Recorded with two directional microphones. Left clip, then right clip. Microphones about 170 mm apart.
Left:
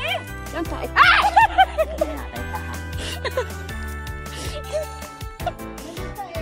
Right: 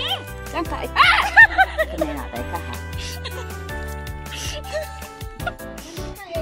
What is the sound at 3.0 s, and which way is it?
Music, 50° left (ahead or behind).